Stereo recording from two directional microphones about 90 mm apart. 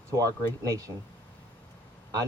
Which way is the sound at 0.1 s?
40° right (ahead or behind).